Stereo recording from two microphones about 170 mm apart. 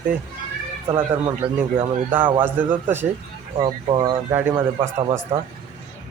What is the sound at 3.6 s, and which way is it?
Speech, 25° right (ahead or behind).